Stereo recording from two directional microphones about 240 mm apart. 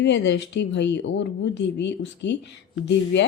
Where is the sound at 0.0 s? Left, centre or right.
Left.